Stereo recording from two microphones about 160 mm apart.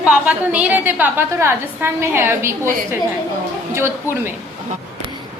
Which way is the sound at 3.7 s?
15° right (ahead or behind).